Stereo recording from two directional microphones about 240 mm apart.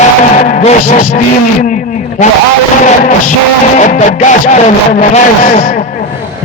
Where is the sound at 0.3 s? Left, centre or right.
Left.